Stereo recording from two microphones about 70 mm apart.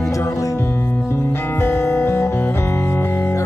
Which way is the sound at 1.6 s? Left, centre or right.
Left.